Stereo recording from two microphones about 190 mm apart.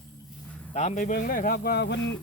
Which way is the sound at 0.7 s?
35° left (ahead or behind).